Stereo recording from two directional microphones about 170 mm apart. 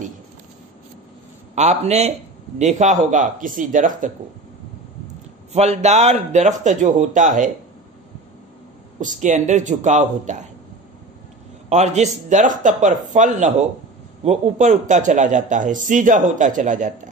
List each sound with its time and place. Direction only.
1.5 s a man's voice: 40° right (ahead or behind)
5.5 s a man's voice: 40° right (ahead or behind)
9.0 s a man's voice: 45° right (ahead or behind)
11.7 s a man's voice: 40° right (ahead or behind)